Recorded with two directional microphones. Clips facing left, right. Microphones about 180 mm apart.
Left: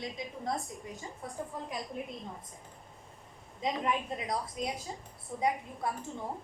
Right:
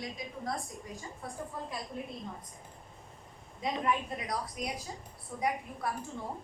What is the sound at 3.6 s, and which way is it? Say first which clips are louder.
A woman's voice: even; 20° left (ahead or behind).